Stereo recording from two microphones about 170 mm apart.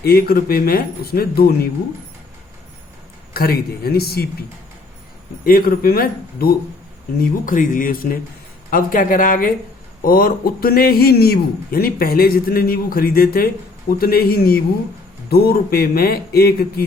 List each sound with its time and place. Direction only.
0.0 s a man's voice: 65° left (ahead or behind)
3.3 s a man's voice: 60° left (ahead or behind)
5.5 s a man's voice: 60° left (ahead or behind)